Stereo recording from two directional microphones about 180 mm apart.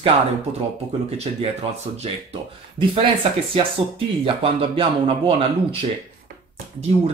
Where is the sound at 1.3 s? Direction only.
30° right (ahead or behind).